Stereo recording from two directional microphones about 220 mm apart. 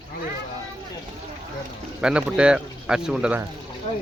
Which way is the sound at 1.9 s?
5° right (ahead or behind).